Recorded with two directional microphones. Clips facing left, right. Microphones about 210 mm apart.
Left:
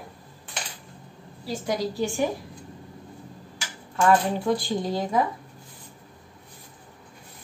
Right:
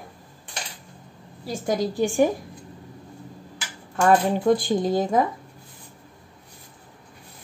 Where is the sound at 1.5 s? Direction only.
50° right (ahead or behind).